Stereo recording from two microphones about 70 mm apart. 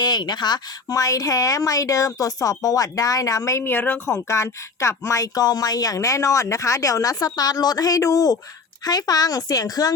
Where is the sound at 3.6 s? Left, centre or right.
Left.